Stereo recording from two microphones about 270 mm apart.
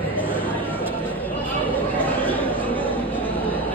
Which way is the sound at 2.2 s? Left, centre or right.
Centre.